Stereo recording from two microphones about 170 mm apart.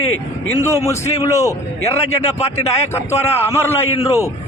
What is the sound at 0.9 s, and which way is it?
Speech, 15° left (ahead or behind).